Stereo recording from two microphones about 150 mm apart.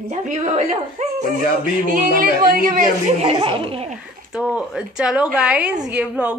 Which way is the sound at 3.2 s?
40° right (ahead or behind).